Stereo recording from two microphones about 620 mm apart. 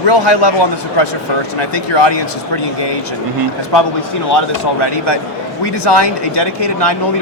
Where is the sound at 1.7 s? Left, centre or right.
Left.